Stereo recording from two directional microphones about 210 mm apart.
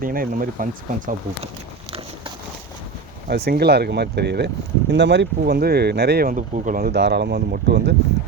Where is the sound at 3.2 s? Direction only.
50° right (ahead or behind).